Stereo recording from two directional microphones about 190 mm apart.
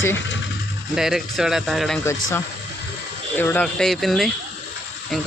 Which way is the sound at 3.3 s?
10° left (ahead or behind).